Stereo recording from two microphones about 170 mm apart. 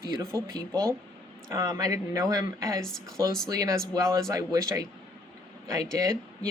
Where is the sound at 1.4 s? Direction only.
20° right (ahead or behind).